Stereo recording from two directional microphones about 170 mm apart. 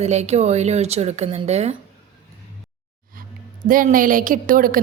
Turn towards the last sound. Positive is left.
turn(degrees=-55)  # may be behind; listen again after turning